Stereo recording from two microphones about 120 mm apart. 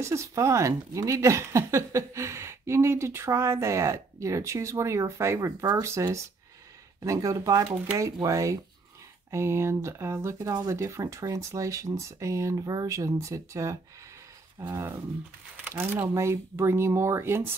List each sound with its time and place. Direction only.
0.0 s speech: 25° right (ahead or behind)